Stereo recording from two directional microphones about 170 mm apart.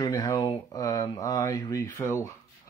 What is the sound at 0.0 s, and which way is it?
Speech, 25° left (ahead or behind).